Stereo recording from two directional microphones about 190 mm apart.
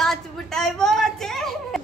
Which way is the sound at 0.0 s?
Centre (ahead or behind).